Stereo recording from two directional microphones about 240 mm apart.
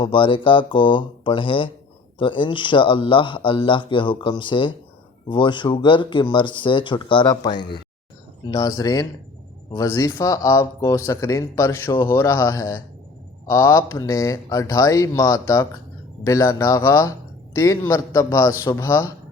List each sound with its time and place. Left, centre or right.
0.0 s speech: left